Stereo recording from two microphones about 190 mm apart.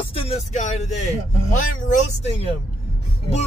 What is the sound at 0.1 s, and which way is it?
Speech, 35° left (ahead or behind).